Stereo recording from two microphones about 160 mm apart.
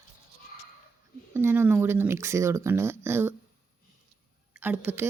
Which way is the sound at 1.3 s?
15° right (ahead or behind).